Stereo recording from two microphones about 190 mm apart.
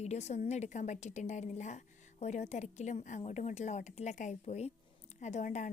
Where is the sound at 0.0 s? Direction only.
35° left (ahead or behind).